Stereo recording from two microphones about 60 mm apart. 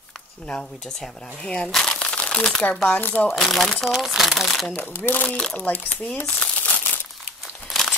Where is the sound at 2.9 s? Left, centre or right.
Left.